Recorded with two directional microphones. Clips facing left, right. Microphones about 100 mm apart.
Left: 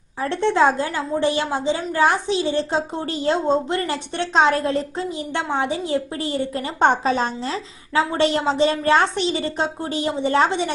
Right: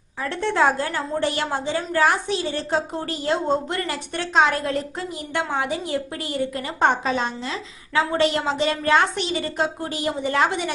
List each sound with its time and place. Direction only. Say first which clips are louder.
0.2 s a woman's voice: left 3 dB; 25° left (ahead or behind)